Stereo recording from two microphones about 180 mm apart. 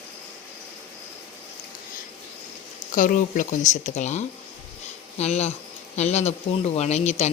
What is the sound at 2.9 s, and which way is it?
Speech, 45° left (ahead or behind).